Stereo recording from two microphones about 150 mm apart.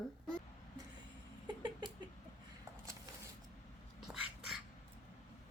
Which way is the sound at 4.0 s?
Centre (ahead or behind).